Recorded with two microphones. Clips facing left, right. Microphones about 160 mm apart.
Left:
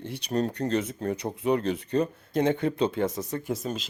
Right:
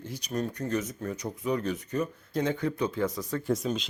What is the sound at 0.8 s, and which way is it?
Speech, 30° left (ahead or behind).